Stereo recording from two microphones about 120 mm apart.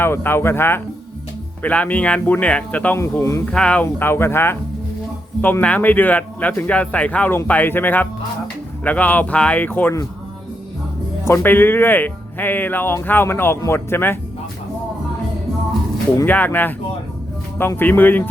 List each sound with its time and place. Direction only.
0.0 s speech: 20° left (ahead or behind)
3.0 s speech: 25° left (ahead or behind)
3.4 s speech: 10° left (ahead or behind)
11.3 s speech: 15° left (ahead or behind)
16.2 s speech: 15° left (ahead or behind)